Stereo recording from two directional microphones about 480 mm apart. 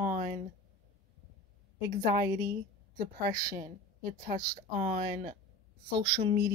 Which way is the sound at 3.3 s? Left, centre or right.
Centre.